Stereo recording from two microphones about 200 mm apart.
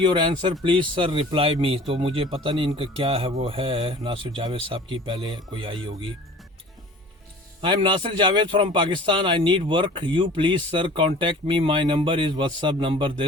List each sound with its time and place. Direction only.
0.0 s a man's voice: 25° right (ahead or behind)
7.6 s a man's voice: 25° right (ahead or behind)